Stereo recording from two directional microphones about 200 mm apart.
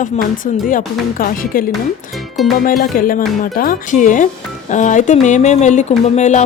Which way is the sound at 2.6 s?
45° left (ahead or behind).